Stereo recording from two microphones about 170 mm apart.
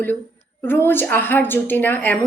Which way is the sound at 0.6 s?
10° left (ahead or behind).